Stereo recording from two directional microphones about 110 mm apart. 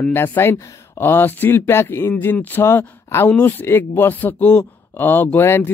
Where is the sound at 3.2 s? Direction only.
10° left (ahead or behind).